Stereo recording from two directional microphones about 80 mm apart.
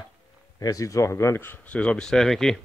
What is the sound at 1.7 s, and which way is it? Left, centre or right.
Speech, centre.